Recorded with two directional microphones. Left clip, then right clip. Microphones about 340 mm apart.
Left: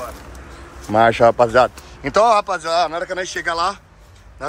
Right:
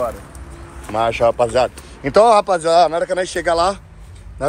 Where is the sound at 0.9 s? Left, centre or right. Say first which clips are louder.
Left 3 dB; left.